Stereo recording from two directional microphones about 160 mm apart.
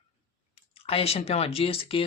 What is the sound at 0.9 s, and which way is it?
Speech, 40° left (ahead or behind).